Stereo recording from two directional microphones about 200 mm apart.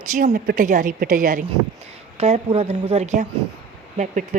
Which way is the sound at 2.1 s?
30° right (ahead or behind).